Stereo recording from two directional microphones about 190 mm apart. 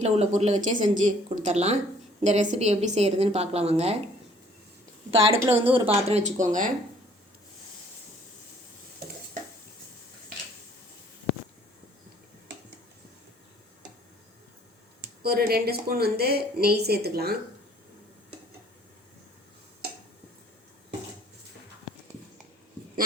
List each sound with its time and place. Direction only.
0.0 s speech: 35° right (ahead or behind)
5.5 s a woman's voice: 30° right (ahead or behind)
15.2 s a woman's voice: 55° right (ahead or behind)